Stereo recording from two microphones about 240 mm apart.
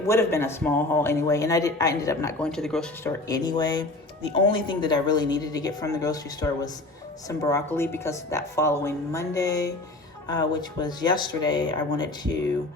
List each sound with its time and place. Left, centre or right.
0.1 s speech: centre
3.2 s speech: centre